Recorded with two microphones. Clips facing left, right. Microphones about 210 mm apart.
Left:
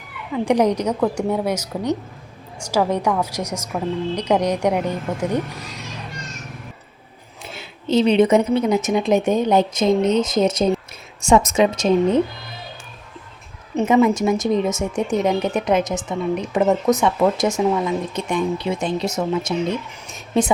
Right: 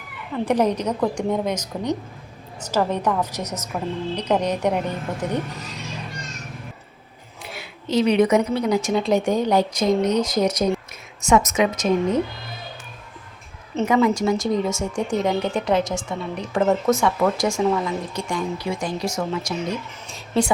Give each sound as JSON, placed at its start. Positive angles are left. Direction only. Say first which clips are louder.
{"t": 0.3, "sound": "a woman's voice", "louder": "left 3 dB", "side_deg": 15}
{"t": 7.5, "sound": "speech", "louder": "left 3 dB", "side_deg": 25}
{"t": 13.7, "sound": "speech", "louder": "left 3 dB", "side_deg": 20}